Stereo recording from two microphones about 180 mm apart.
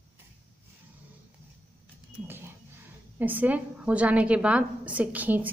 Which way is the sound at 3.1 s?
10° right (ahead or behind).